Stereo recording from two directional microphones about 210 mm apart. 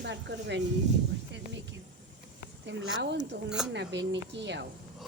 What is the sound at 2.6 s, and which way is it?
Speech, 55° right (ahead or behind).